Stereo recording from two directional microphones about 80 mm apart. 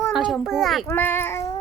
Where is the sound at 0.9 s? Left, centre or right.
Left.